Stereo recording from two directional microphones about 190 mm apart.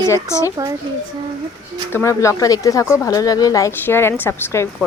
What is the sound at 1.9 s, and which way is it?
Speech, 15° left (ahead or behind).